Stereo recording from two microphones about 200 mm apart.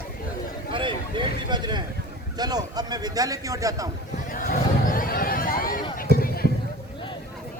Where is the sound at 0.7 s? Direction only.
25° right (ahead or behind).